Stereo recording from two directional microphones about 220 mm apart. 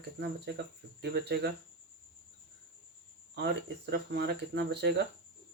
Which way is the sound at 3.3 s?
50° right (ahead or behind).